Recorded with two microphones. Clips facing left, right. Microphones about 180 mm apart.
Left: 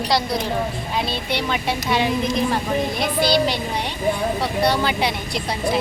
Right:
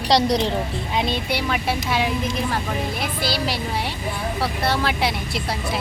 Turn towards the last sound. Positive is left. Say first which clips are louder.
# left 1 dB
turn(degrees=0)  # may be behind; listen again after turning